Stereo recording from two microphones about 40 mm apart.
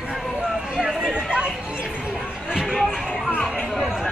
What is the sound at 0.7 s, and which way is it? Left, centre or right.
Chatter, right.